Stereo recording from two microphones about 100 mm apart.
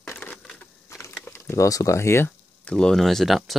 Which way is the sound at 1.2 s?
25° left (ahead or behind).